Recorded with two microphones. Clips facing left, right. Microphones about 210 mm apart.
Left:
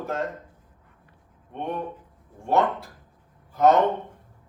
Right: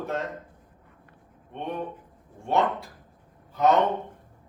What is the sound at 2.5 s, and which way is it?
A man's voice, centre (ahead or behind).